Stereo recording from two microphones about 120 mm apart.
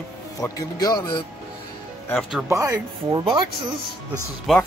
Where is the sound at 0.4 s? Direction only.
30° left (ahead or behind).